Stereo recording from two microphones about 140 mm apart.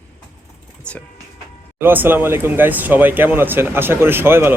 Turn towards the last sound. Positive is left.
turn(degrees=-15)  # may be behind; listen again after turning